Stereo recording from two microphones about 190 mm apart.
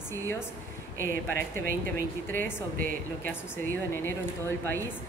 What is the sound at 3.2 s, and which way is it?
A woman's voice, 10° left (ahead or behind).